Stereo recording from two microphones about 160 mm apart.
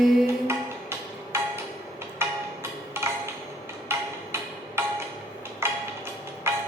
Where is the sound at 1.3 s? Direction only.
15° right (ahead or behind).